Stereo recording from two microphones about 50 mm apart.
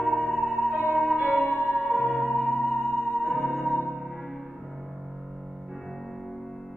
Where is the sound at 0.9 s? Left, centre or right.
Right.